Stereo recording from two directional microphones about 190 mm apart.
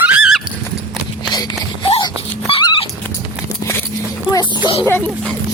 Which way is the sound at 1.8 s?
25° left (ahead or behind).